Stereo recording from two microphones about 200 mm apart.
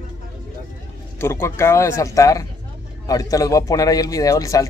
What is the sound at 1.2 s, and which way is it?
Speech, 15° left (ahead or behind).